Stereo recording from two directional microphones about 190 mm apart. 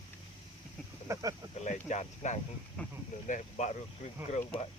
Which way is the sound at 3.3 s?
40° left (ahead or behind).